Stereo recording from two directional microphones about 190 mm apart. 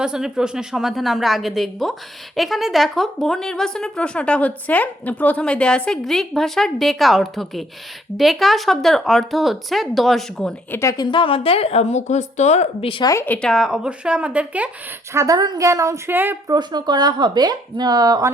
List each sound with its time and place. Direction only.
0.0 s a woman's voice: 5° right (ahead or behind)
10.8 s a woman's voice: 20° left (ahead or behind); by 16.6 s 10° right (ahead or behind)
16.6 s speech: 20° right (ahead or behind)